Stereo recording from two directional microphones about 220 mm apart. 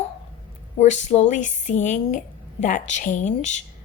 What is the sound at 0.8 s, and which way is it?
Speech, 30° left (ahead or behind).